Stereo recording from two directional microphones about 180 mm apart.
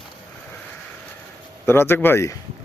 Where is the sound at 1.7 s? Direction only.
10° left (ahead or behind).